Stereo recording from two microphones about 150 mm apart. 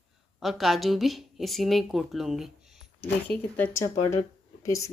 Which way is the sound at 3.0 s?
10° left (ahead or behind).